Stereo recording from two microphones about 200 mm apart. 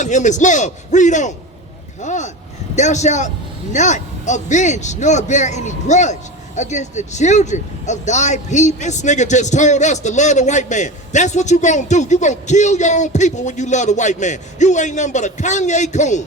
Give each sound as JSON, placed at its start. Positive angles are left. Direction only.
{"t": 0.0, "sound": "speech", "side_deg": 35}